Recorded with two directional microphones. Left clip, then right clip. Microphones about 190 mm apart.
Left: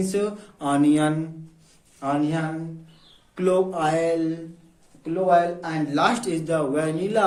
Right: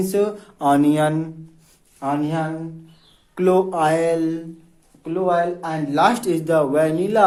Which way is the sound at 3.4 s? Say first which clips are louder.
Right 4 dB; 35° right (ahead or behind).